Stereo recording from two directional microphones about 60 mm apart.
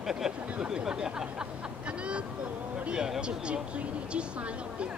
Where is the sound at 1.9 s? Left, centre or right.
Centre.